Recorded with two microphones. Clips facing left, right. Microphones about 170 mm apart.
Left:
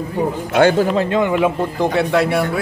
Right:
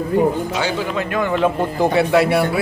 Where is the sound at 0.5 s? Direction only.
55° left (ahead or behind).